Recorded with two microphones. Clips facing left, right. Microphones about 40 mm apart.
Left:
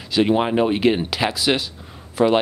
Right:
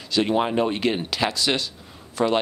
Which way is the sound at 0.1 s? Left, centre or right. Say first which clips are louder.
Left 3 dB; centre.